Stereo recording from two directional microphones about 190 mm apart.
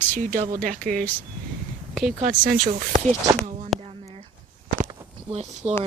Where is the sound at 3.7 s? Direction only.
Centre (ahead or behind).